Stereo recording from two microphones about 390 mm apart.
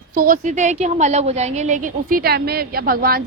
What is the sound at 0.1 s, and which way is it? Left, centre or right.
A woman's voice, right.